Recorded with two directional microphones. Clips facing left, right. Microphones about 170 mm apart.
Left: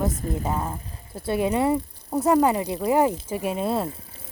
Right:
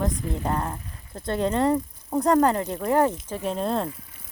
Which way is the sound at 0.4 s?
5° left (ahead or behind).